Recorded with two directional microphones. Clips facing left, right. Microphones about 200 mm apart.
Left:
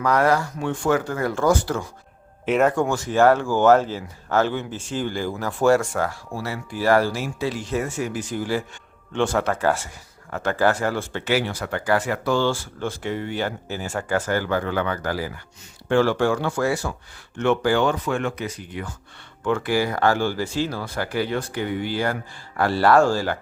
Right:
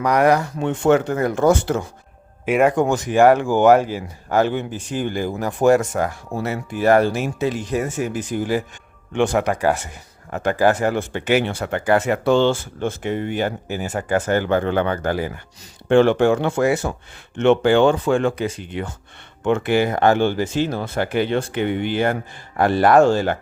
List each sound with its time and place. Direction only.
0.0 s speech: 15° right (ahead or behind)
2.5 s speech: 10° right (ahead or behind)